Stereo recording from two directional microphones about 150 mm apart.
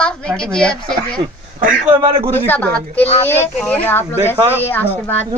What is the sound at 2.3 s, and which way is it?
Speech, 15° left (ahead or behind).